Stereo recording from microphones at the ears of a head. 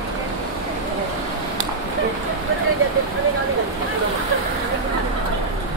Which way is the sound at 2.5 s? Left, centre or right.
Right.